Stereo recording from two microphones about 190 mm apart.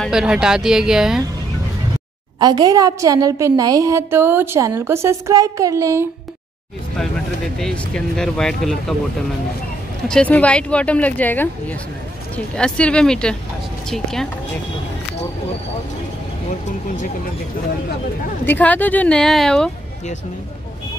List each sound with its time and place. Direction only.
0.0 s speech: 5° right (ahead or behind)
2.4 s a woman's voice: 20° right (ahead or behind)
7.5 s speech: 5° left (ahead or behind)
10.0 s speech: 5° left (ahead or behind)
18.4 s speech: 10° left (ahead or behind)